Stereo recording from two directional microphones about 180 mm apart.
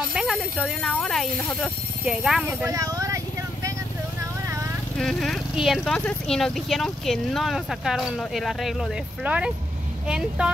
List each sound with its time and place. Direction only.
0.1 s speech: centre (ahead or behind)
2.6 s speech: 20° right (ahead or behind)
4.9 s speech: centre (ahead or behind)